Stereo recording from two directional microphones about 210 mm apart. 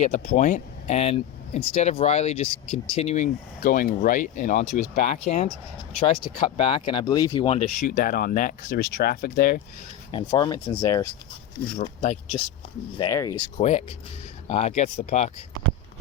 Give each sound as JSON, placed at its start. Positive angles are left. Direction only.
{"t": 0.0, "sound": "speech", "side_deg": 35}
{"t": 7.8, "sound": "speech", "side_deg": 40}
{"t": 10.1, "sound": "speech", "side_deg": 20}
{"t": 11.8, "sound": "speech", "side_deg": 30}
{"t": 13.0, "sound": "speech", "side_deg": 15}
{"t": 13.6, "sound": "speech", "side_deg": 30}